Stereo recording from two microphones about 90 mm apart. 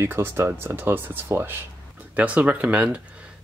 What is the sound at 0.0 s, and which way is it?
Speech, 25° right (ahead or behind).